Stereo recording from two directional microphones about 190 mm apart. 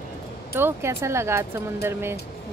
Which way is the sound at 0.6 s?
15° right (ahead or behind).